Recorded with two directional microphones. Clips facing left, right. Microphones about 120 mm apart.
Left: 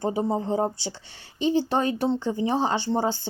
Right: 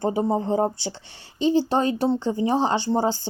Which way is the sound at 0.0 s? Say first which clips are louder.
Right 3 dB; 45° right (ahead or behind).